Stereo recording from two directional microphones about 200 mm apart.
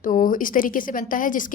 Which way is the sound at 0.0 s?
40° left (ahead or behind).